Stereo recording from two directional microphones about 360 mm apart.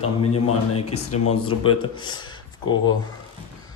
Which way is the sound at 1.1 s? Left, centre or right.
Left.